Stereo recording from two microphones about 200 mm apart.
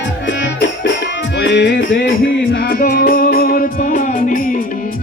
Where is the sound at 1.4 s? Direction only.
60° left (ahead or behind).